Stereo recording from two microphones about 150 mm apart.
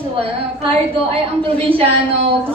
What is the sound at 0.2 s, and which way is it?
A woman's voice, 40° right (ahead or behind).